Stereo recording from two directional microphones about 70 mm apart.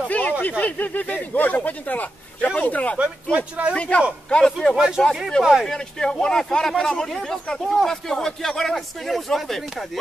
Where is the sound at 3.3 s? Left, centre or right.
Right.